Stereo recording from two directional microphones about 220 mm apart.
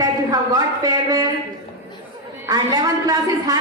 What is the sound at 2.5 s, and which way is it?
A woman's voice, 15° right (ahead or behind).